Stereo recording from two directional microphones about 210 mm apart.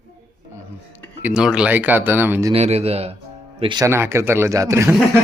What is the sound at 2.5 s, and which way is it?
A man's voice, 30° right (ahead or behind).